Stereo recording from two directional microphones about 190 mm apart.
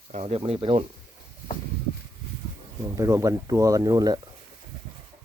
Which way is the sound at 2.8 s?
15° right (ahead or behind).